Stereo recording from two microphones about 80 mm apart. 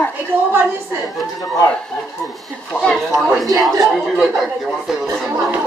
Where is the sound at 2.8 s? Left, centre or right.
Centre.